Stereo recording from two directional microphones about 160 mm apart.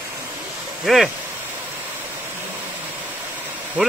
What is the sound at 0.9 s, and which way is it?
Speech, centre (ahead or behind).